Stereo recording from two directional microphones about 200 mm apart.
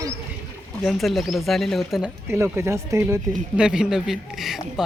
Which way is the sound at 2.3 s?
15° right (ahead or behind).